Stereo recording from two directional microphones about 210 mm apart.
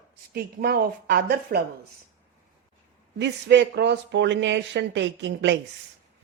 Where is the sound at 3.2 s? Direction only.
55° right (ahead or behind).